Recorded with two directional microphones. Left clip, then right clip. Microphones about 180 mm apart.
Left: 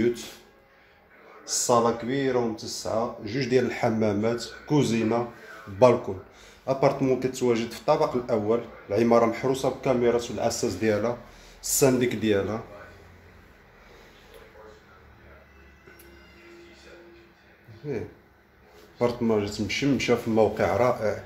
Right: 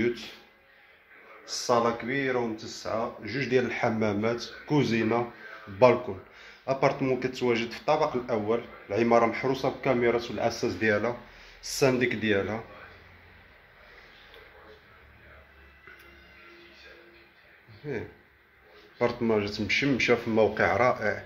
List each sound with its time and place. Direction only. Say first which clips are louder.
0.0 s speech: left 3 dB; 10° left (ahead or behind)
1.4 s speech: left 3 dB; 15° left (ahead or behind)
3.3 s speech: left 1 dB; 15° left (ahead or behind); by 5.2 s 5° right (ahead or behind)
5.8 s speech: left 2 dB; 10° left (ahead or behind)
9.5 s speech: left 2 dB; 5° right (ahead or behind)
18.9 s speech: left 2 dB; centre (ahead or behind)